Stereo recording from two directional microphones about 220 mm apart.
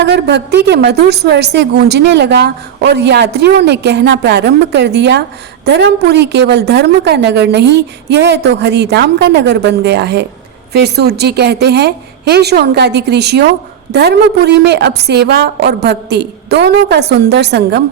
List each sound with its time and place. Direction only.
0.0 s a woman's voice: 50° right (ahead or behind)